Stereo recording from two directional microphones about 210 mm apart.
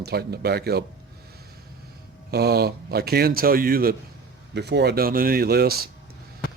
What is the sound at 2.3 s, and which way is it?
Speech, 50° right (ahead or behind).